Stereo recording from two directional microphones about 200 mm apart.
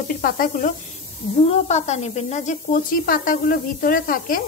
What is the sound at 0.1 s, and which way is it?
Speech, 45° left (ahead or behind).